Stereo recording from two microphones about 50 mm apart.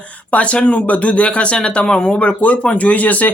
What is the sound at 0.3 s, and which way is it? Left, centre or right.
Speech, left.